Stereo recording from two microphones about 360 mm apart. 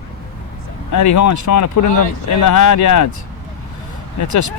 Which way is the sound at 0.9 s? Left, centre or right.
Left.